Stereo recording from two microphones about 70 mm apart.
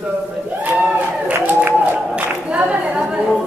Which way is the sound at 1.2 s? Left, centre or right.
Right.